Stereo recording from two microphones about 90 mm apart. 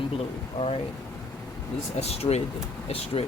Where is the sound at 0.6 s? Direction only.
55° left (ahead or behind).